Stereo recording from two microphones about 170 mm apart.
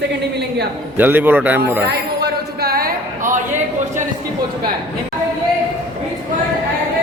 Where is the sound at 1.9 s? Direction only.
70° right (ahead or behind).